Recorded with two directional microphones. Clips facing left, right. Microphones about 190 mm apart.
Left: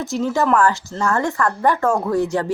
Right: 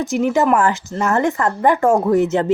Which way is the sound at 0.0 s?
15° right (ahead or behind).